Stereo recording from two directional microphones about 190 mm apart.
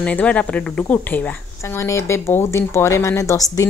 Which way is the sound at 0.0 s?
5° left (ahead or behind).